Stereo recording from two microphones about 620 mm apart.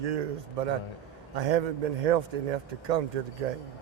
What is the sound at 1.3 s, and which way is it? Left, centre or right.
Speech, right.